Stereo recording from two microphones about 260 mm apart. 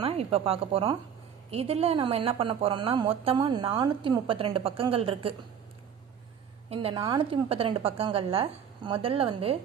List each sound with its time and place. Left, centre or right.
0.0 s speech: right
6.7 s speech: right